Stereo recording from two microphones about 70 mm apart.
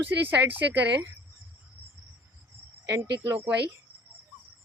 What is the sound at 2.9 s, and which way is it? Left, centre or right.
Speech, right.